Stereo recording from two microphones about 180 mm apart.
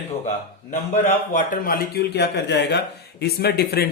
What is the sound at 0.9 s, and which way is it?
Speech, 45° left (ahead or behind).